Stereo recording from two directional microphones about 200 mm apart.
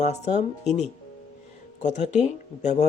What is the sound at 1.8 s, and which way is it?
Speech, 35° left (ahead or behind).